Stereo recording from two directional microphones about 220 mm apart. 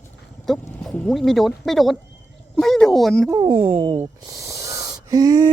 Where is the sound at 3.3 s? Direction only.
20° right (ahead or behind).